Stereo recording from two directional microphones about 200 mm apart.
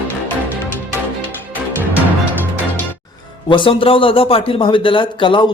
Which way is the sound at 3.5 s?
25° left (ahead or behind).